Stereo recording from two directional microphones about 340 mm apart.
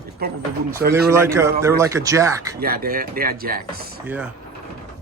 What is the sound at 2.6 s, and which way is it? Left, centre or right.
Speech, right.